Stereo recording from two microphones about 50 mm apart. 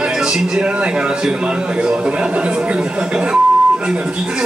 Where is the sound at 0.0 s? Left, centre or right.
Centre.